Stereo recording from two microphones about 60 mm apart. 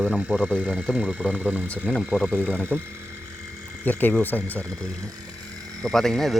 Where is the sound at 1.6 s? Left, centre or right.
Left.